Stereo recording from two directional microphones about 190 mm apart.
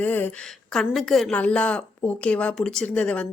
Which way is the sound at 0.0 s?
10° left (ahead or behind).